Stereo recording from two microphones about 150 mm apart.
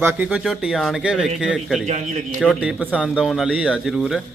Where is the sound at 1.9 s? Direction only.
55° right (ahead or behind).